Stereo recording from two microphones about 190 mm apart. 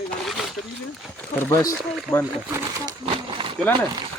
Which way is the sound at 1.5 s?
15° left (ahead or behind).